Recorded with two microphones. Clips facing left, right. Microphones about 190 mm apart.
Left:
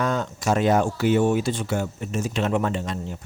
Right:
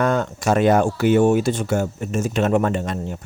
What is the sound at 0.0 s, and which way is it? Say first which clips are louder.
Speech: right 5 dB; 55° right (ahead or behind).